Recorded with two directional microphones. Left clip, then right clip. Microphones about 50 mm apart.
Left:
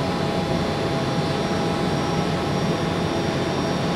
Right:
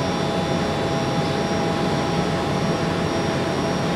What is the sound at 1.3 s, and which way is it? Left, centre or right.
Vehicle, left.